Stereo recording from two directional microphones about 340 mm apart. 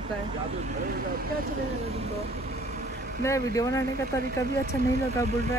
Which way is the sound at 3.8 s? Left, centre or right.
Right.